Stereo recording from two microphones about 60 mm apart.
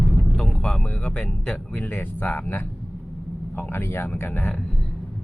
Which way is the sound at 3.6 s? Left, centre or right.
Left.